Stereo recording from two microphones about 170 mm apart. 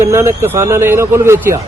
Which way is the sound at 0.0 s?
15° right (ahead or behind).